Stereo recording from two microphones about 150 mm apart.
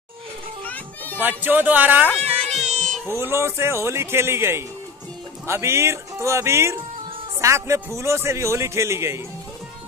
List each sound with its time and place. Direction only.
0.7 s children playing: 10° left (ahead or behind)
1.2 s speech: 10° right (ahead or behind)
2.2 s music: 45° right (ahead or behind)
2.6 s cat: 50° right (ahead or behind)
3.1 s a man's voice: 15° right (ahead or behind)